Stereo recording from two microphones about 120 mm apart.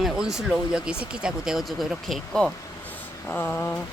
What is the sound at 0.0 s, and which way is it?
A woman's voice, 5° right (ahead or behind).